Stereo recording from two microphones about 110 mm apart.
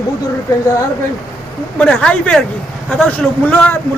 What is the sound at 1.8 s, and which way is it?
Speech, 10° left (ahead or behind).